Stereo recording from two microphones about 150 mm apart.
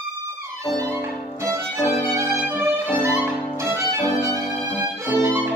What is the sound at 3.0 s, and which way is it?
Music, 15° right (ahead or behind).